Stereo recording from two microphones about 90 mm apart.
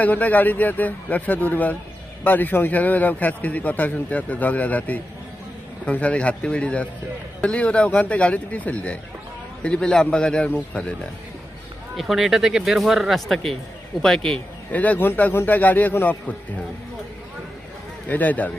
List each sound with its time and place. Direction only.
0.0 s a man's voice: 20° left (ahead or behind)
11.9 s speech: centre (ahead or behind)
14.7 s a man's voice: 15° left (ahead or behind)
18.1 s a man's voice: 20° left (ahead or behind)